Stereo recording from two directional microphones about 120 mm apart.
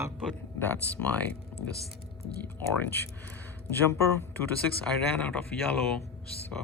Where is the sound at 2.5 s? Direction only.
15° left (ahead or behind).